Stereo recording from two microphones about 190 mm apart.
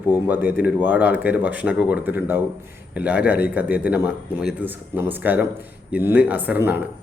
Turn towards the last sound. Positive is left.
turn(degrees=-10)  # may be behind; listen again after turning